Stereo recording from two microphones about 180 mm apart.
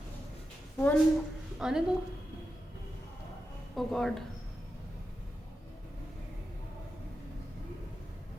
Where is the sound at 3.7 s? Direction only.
Centre (ahead or behind).